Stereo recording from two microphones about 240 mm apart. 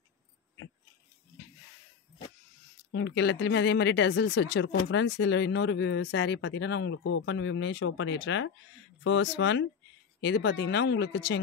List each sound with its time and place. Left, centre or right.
2.9 s speech: left